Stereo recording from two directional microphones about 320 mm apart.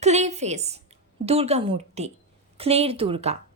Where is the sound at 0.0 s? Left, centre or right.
Right.